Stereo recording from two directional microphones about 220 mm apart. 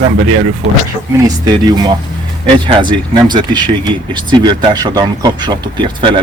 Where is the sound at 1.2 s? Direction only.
15° right (ahead or behind).